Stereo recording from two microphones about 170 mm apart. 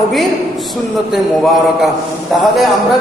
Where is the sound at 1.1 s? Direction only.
Centre (ahead or behind).